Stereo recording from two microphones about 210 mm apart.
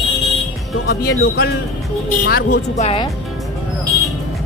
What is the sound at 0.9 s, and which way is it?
Speech, 50° left (ahead or behind).